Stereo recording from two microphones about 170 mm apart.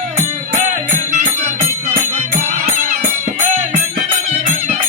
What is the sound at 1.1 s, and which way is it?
Music, 40° right (ahead or behind).